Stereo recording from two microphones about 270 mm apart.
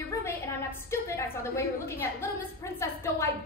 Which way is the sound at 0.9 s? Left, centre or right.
Centre.